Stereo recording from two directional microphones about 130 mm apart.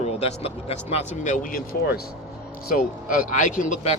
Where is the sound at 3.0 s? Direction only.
85° left; by 4.0 s 65° left (ahead or behind).